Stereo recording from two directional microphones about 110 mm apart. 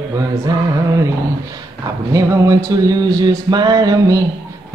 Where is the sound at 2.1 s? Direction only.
30° right (ahead or behind).